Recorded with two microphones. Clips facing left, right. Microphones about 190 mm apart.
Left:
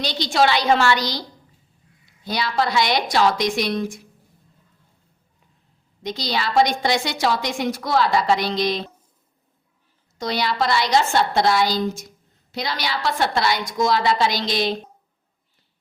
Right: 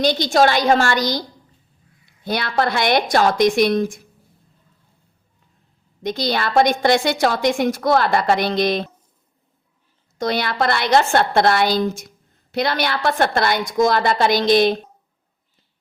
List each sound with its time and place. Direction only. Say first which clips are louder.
0.0 s a woman's voice: right 4 dB; 50° right (ahead or behind)
2.2 s a woman's voice: right 2 dB; 55° right (ahead or behind)
6.0 s a woman's voice: right 4 dB; 55° right (ahead or behind)
10.2 s a woman's voice: right 2 dB; 55° right (ahead or behind)